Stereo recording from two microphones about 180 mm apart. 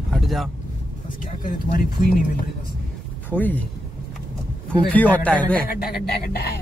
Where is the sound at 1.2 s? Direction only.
50° left (ahead or behind).